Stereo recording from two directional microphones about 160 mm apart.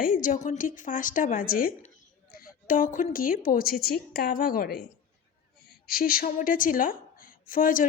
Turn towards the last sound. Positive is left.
turn(degrees=60)  # may be behind; listen again after turning